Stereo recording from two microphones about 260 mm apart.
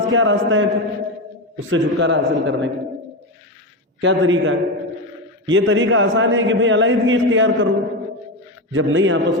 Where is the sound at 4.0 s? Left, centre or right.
Right.